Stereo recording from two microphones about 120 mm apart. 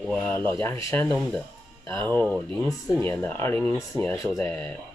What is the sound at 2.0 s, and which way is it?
Speech, 15° left (ahead or behind).